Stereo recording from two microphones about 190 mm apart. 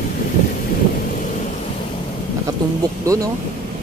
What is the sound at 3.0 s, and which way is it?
Speech, 15° right (ahead or behind).